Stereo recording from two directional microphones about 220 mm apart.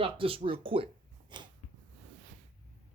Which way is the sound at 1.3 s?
20° right (ahead or behind).